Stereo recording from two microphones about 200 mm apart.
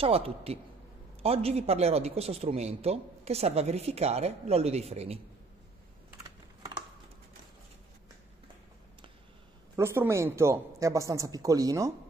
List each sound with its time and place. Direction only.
0.0 s a woman's voice: 30° right (ahead or behind)
9.8 s speech: 15° right (ahead or behind)